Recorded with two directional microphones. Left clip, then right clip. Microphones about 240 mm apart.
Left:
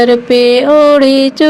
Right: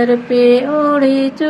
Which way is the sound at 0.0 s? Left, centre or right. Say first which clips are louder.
Left 4 dB; left.